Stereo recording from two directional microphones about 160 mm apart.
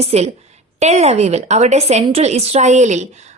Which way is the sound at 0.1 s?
40° right (ahead or behind).